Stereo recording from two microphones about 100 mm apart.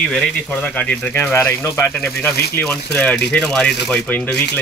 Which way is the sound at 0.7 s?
15° left (ahead or behind).